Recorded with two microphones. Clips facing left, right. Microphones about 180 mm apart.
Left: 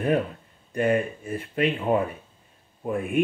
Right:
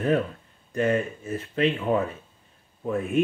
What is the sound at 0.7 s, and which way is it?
Speech, 15° left (ahead or behind).